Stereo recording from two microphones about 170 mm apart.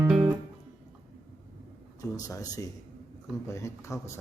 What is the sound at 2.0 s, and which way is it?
Speech, 20° left (ahead or behind).